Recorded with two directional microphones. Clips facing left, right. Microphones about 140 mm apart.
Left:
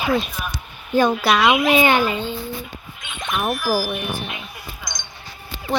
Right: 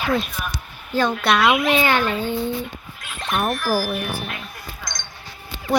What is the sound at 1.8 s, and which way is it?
Speech, 15° left (ahead or behind).